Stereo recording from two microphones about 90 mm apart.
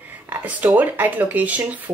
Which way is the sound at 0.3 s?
20° right (ahead or behind).